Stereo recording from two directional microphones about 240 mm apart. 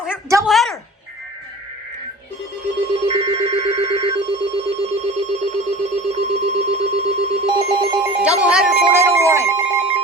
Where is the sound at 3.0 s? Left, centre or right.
Centre.